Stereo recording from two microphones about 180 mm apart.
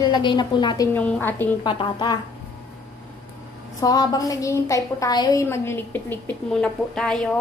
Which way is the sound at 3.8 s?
20° left (ahead or behind).